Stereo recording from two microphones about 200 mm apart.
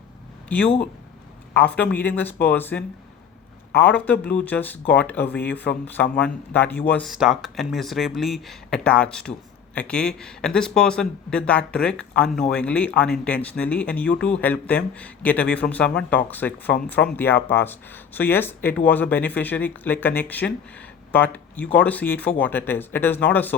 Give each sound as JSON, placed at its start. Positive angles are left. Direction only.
{"t": 0.4, "sound": "speech", "side_deg": 5}